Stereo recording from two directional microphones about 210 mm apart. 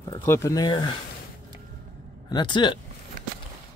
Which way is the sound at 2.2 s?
20° left (ahead or behind).